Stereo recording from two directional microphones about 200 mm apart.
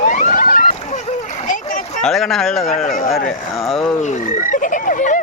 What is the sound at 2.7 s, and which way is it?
Speech, 40° left (ahead or behind).